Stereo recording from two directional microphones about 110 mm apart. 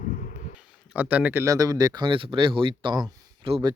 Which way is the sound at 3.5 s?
55° right (ahead or behind).